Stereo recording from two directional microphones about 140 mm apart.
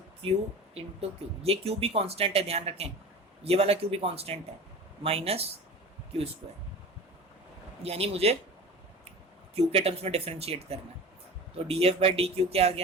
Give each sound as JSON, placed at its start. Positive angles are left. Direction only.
{"t": 0.7, "sound": "speech", "side_deg": -45}
{"t": 7.8, "sound": "speech", "side_deg": -45}
{"t": 9.6, "sound": "speech", "side_deg": -45}